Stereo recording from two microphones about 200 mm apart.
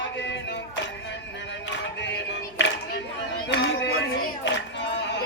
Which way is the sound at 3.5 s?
55° left (ahead or behind).